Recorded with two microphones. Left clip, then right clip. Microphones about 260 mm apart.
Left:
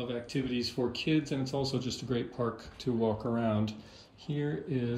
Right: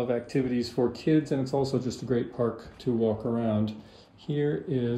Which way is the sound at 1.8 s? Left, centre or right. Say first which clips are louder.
Right 3 dB; right.